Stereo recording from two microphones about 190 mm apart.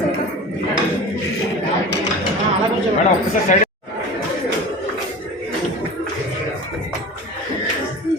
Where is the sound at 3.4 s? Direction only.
40° left (ahead or behind).